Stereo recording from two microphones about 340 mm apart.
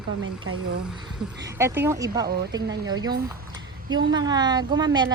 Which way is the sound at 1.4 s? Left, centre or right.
Centre.